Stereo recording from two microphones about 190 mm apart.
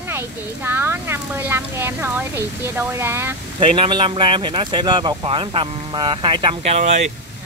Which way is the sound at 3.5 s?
25° right (ahead or behind).